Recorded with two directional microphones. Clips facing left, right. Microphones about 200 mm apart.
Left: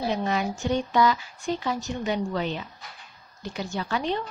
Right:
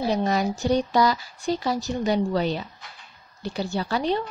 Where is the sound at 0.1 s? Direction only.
40° right (ahead or behind).